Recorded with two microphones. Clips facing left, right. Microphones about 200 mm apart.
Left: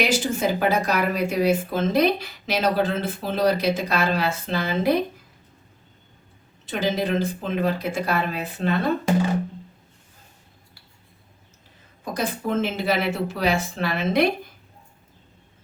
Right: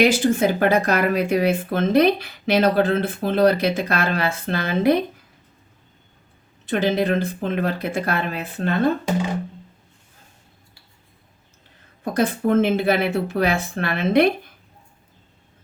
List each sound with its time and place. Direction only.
0.0 s speech: 55° right (ahead or behind)
6.7 s speech: 55° right (ahead or behind)
12.1 s speech: 55° right (ahead or behind)